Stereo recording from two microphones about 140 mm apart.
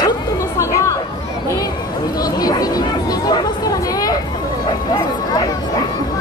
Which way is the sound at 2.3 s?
25° left (ahead or behind).